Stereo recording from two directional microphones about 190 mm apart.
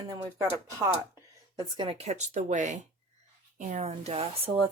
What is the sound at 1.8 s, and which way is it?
Speech, 30° right (ahead or behind).